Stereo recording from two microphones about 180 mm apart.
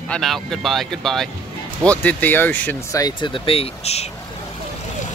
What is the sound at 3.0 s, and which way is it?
Speech, 25° left (ahead or behind).